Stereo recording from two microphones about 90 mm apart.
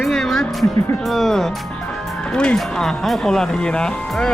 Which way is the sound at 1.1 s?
5° left (ahead or behind).